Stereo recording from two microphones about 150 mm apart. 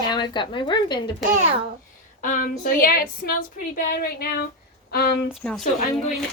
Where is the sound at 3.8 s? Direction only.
70° left (ahead or behind); by 5.1 s 90° left.